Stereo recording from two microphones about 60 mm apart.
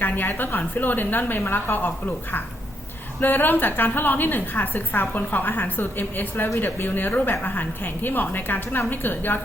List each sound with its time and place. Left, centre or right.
0.0 s a woman's voice: left
3.2 s a woman's voice: left